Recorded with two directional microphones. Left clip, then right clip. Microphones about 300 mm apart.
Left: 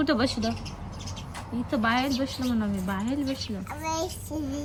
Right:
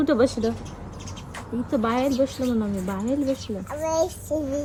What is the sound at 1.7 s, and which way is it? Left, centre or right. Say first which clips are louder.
A woman's voice: right 2 dB; left.